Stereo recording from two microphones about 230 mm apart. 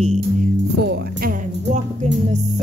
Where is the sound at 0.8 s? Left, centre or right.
Right.